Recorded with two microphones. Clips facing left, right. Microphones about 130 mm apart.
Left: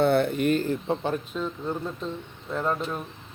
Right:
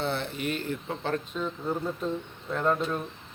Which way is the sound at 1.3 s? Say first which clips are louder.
Left 1 dB; centre (ahead or behind).